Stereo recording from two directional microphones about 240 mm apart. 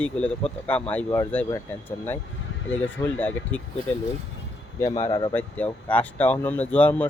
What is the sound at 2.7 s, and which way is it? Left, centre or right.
Speech, centre.